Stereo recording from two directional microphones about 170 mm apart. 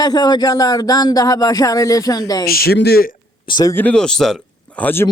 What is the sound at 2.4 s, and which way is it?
Speech, 65° left (ahead or behind).